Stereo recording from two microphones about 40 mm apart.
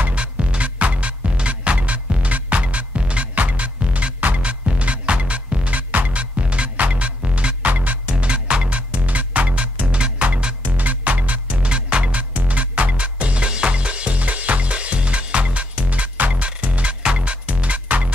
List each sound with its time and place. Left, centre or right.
0.1 s music: right
8.1 s music: right
11.5 s music: right